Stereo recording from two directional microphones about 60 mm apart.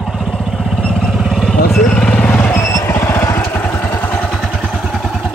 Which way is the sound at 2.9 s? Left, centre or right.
Left.